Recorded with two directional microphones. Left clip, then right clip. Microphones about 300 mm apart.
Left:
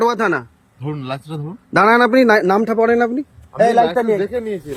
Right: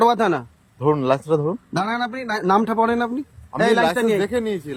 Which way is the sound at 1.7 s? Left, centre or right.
Centre.